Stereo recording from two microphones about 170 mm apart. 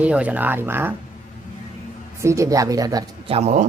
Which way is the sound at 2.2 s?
15° right (ahead or behind).